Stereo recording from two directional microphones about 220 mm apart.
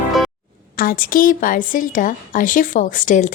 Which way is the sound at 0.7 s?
40° left (ahead or behind).